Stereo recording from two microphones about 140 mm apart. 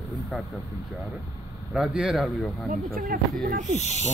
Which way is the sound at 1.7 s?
5° right (ahead or behind).